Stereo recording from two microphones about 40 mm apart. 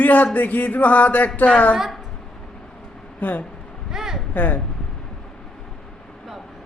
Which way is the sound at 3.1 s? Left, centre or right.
Left.